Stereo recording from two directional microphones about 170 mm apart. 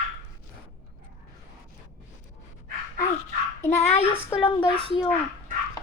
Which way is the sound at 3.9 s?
35° left (ahead or behind).